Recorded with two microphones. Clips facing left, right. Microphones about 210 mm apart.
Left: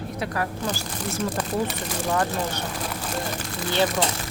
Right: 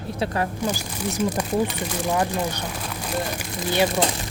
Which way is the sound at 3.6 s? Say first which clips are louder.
Right 2 dB; 15° right (ahead or behind).